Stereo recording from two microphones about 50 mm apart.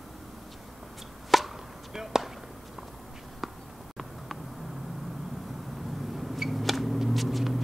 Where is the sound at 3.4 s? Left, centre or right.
Centre.